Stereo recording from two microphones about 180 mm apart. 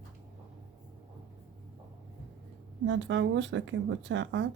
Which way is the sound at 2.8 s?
80° right.